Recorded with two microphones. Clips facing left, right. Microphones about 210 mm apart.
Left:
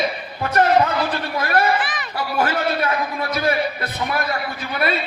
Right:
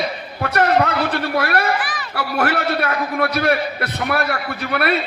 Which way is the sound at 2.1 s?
70° right (ahead or behind).